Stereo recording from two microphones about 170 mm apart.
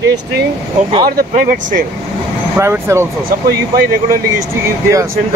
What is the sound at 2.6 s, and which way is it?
Speech, 15° right (ahead or behind).